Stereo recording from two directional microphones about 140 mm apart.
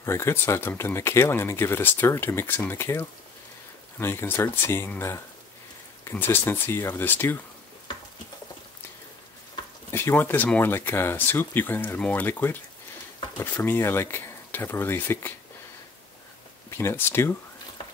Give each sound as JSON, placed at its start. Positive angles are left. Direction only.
{"t": 0.0, "sound": "speech", "side_deg": 20}
{"t": 9.8, "sound": "speech", "side_deg": 15}
{"t": 16.7, "sound": "speech", "side_deg": 15}